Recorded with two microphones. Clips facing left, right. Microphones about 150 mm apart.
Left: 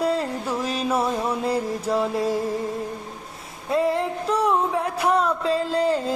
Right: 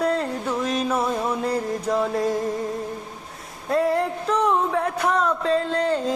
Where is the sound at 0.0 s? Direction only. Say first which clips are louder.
Even; 30° left (ahead or behind).